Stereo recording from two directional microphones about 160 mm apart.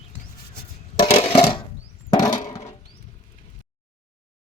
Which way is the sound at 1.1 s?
40° left (ahead or behind).